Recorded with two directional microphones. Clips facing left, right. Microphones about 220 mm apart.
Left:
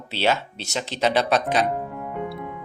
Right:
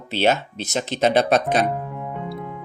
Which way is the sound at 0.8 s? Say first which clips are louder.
Right 3 dB; 50° right (ahead or behind).